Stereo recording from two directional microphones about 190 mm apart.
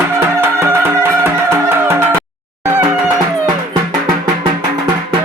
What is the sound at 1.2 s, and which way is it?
Music, 15° right (ahead or behind).